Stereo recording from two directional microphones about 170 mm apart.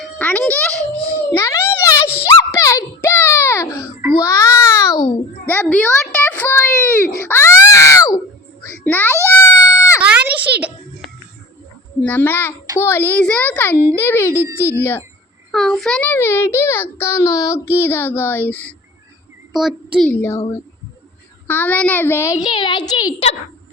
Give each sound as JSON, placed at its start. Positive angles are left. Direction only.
{"t": 0.0, "sound": "music", "side_deg": 10}
{"t": 1.3, "sound": "a sound", "side_deg": 15}
{"t": 4.2, "sound": "babbling", "side_deg": 20}
{"t": 5.5, "sound": "a sound", "side_deg": 10}
{"t": 8.7, "sound": "babbling", "side_deg": 10}
{"t": 9.3, "sound": "goat", "side_deg": 15}
{"t": 10.0, "sound": "music", "side_deg": -10}
{"t": 12.0, "sound": "a child's voice", "side_deg": 10}
{"t": 15.5, "sound": "a child's voice", "side_deg": 0}
{"t": 19.5, "sound": "a child's voice", "side_deg": 0}
{"t": 20.1, "sound": "a child's voice", "side_deg": 15}
{"t": 21.4, "sound": "a child's voice", "side_deg": 10}
{"t": 22.5, "sound": "a woman's voice", "side_deg": 30}